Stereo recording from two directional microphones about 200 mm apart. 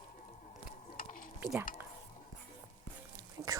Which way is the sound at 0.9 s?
45° left (ahead or behind).